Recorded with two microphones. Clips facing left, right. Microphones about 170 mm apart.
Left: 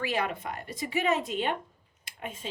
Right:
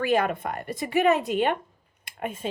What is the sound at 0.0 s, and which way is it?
Speech, 50° right (ahead or behind).